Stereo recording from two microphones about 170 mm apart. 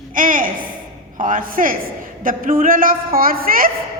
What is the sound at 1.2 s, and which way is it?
A woman's voice, 50° right (ahead or behind).